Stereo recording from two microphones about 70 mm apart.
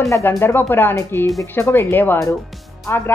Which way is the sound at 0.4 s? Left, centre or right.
Left.